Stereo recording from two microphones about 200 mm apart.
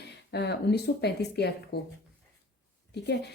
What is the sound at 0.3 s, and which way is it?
A woman's voice, 55° left (ahead or behind).